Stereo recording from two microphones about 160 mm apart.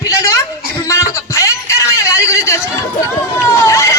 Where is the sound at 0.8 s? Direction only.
20° left (ahead or behind).